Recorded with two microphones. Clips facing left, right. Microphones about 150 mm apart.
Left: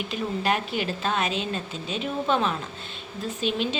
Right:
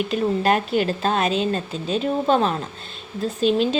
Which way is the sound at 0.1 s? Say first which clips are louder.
Right 5 dB; 45° right (ahead or behind).